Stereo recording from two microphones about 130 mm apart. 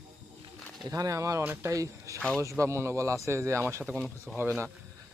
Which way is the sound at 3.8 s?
5° left (ahead or behind).